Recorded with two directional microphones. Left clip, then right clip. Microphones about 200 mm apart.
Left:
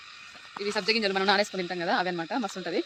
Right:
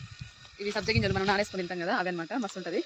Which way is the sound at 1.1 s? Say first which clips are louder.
Left 3 dB; 10° right (ahead or behind).